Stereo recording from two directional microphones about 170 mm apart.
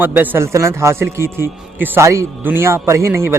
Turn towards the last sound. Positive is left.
turn(degrees=-15)  # may be behind; listen again after turning